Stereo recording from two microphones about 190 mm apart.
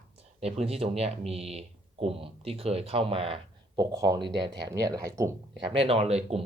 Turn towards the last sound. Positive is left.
turn(degrees=-35)  # may be behind; listen again after turning